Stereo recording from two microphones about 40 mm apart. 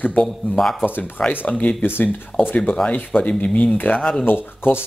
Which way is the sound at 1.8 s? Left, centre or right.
Left.